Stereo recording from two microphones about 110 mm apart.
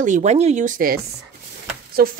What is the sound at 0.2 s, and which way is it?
Speech, 90° right.